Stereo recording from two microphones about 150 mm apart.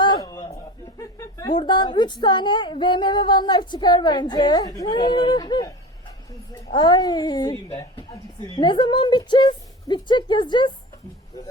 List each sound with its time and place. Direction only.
0.0 s a sound: 25° left (ahead or behind)
0.9 s speech: 25° left (ahead or behind)
6.7 s a woman's voice: 30° left (ahead or behind)